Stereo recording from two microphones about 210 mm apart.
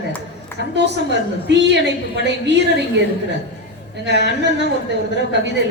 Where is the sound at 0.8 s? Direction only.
55° right (ahead or behind).